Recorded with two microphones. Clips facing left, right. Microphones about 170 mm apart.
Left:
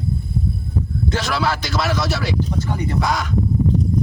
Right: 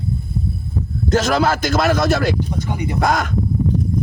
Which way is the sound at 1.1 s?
45° right (ahead or behind).